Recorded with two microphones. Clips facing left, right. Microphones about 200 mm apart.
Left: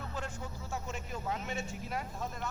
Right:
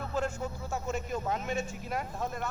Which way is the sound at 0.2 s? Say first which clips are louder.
Right 11 dB; 45° right (ahead or behind).